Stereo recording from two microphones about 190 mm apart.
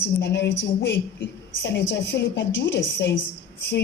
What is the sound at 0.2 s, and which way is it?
A woman's voice, 65° left (ahead or behind).